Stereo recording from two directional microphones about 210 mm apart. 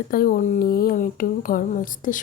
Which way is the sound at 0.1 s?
45° left (ahead or behind).